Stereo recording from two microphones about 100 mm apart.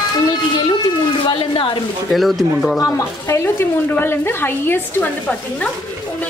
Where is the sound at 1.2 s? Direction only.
55° left (ahead or behind).